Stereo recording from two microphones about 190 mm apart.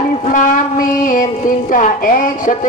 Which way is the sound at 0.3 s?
45° left (ahead or behind).